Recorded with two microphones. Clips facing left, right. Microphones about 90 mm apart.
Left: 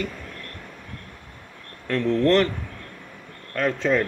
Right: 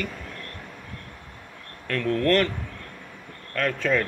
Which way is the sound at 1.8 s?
15° left (ahead or behind).